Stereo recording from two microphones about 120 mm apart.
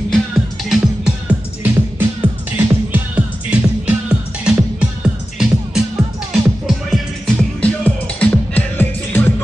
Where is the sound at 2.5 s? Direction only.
15° right (ahead or behind).